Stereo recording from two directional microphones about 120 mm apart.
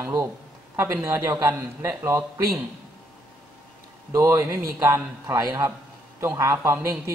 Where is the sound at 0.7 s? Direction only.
20° right (ahead or behind).